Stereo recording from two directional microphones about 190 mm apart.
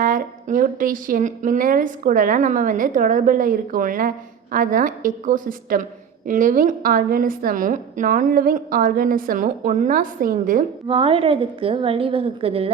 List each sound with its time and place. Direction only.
0.0 s a woman's voice: 45° right (ahead or behind)
10.8 s a woman's voice: 30° right (ahead or behind)